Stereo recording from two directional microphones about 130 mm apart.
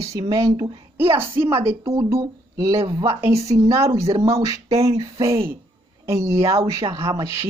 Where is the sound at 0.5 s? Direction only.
45° right (ahead or behind).